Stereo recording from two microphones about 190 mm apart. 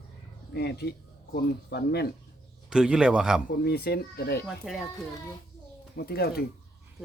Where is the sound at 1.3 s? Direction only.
55° left (ahead or behind).